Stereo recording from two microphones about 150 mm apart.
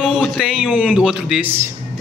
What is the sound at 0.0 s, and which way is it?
A man's voice, 5° right (ahead or behind).